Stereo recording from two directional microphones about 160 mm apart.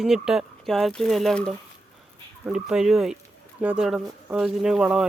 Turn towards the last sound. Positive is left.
turn(degrees=-5)  # may be behind; listen again after turning